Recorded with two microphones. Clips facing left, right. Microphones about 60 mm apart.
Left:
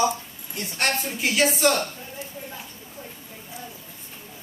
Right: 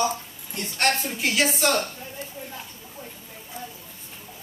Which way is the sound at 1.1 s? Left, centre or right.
Centre.